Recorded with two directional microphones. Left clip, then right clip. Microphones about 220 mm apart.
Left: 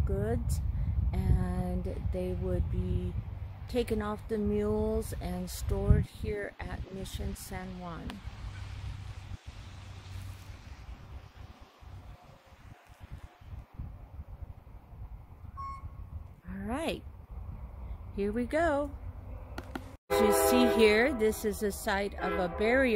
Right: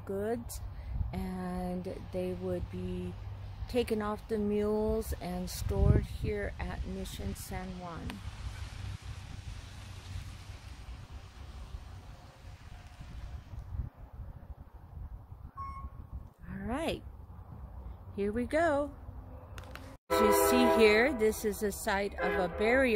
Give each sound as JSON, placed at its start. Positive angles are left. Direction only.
{"t": 0.0, "sound": "speech", "side_deg": 0}
{"t": 3.6, "sound": "speech", "side_deg": -5}
{"t": 8.2, "sound": "a sound", "side_deg": -40}
{"t": 16.4, "sound": "a sound", "side_deg": 5}
{"t": 18.1, "sound": "speech", "side_deg": 5}
{"t": 20.1, "sound": "speech", "side_deg": 5}